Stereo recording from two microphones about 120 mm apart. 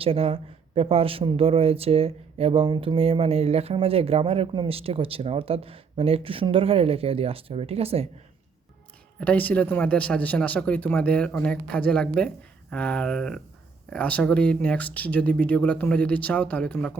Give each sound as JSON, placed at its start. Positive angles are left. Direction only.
{"t": 0.0, "sound": "speech", "side_deg": -55}
{"t": 9.2, "sound": "speech", "side_deg": 15}